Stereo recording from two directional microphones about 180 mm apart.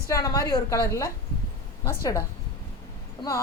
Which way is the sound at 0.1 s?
20° left (ahead or behind).